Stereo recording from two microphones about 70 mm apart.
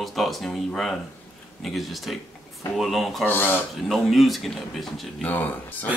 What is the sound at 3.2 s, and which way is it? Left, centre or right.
Speech, left.